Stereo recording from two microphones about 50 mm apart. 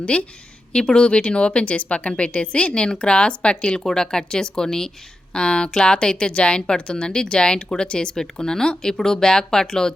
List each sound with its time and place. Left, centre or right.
0.0 s speech: left